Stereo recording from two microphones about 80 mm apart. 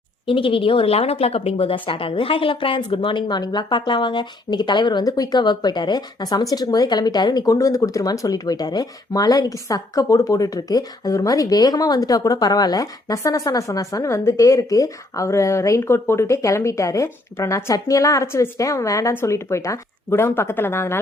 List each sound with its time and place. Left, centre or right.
0.3 s speech: left
5.0 s speech: left
20.1 s speech: left